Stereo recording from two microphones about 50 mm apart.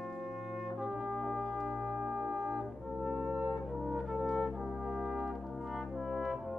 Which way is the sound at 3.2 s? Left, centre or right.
Centre.